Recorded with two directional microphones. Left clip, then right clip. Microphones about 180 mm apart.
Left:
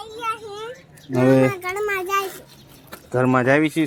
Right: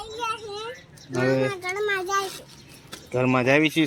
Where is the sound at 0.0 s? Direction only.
15° left (ahead or behind).